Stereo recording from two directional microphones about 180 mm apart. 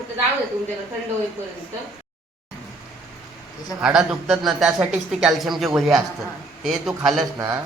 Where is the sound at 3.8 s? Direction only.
5° right (ahead or behind).